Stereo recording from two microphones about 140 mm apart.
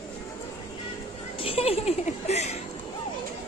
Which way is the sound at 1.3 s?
45° left (ahead or behind).